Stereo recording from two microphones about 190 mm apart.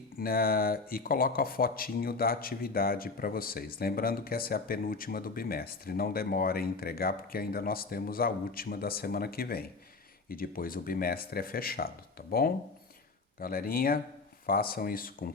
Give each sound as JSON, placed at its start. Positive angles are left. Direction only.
{"t": 0.2, "sound": "speech", "side_deg": 50}
{"t": 13.4, "sound": "speech", "side_deg": 50}